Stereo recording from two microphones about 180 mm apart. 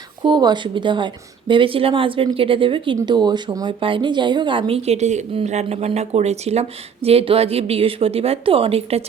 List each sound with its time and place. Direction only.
0.2 s speech: 25° right (ahead or behind)